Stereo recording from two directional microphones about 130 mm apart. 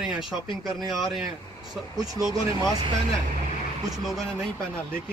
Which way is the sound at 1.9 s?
30° right (ahead or behind).